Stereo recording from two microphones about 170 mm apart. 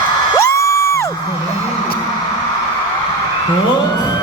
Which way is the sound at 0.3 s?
15° left (ahead or behind).